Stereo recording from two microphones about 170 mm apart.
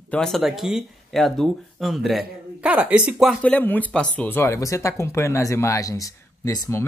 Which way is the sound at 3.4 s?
10° left (ahead or behind).